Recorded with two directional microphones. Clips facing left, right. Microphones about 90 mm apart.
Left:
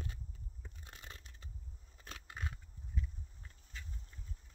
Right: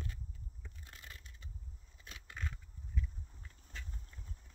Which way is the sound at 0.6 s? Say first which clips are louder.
Left 1 dB; 25° left (ahead or behind).